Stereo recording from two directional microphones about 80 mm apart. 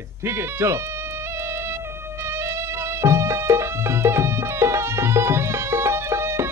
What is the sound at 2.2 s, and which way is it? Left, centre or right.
Music, right.